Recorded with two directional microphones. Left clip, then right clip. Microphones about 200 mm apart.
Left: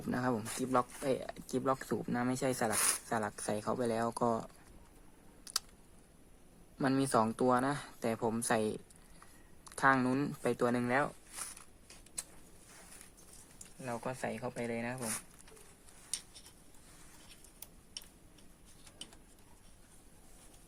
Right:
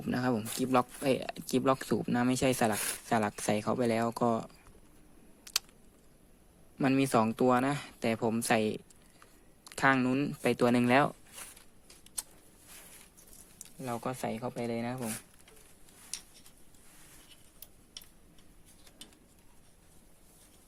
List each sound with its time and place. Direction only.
0.1 s speech: 25° right (ahead or behind)
6.9 s speech: 20° right (ahead or behind)
9.6 s a sound: 25° right (ahead or behind)
10.0 s speech: 10° right (ahead or behind)
10.4 s speech: 30° right (ahead or behind)
10.8 s speech: 50° right (ahead or behind)
13.8 s speech: 45° right (ahead or behind)